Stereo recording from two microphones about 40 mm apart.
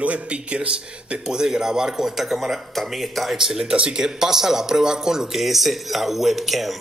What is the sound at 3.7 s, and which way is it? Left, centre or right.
Speech, right.